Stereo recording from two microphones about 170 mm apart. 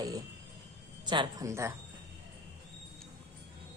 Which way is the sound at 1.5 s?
15° right (ahead or behind).